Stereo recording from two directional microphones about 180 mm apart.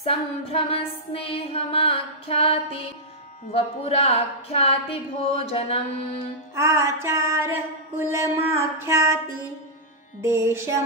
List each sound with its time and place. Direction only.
0.0 s a sound: 30° left (ahead or behind)
6.5 s music: 15° right (ahead or behind)
10.2 s music: 15° right (ahead or behind)